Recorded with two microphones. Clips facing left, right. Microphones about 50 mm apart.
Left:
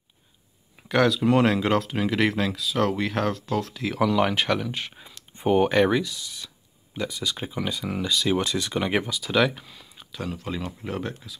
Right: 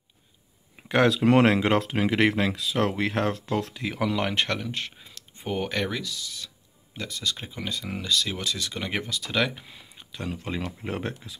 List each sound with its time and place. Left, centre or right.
1.0 s speech: right
1.6 s speech: right
3.7 s speech: centre
8.4 s speech: left; by 9.6 s centre
9.9 s speech: centre
10.8 s speech: right